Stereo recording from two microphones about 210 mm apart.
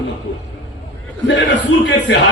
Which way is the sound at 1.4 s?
60° left (ahead or behind).